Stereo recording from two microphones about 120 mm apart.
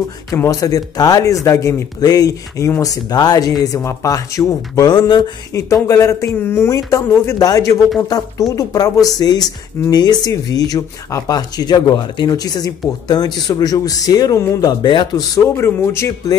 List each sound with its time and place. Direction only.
0.3 s speech: 30° left (ahead or behind)
5.5 s speech: 25° left (ahead or behind)
15.3 s speech: 20° left (ahead or behind)